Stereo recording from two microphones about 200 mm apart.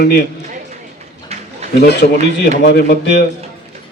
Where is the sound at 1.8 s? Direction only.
55° left (ahead or behind).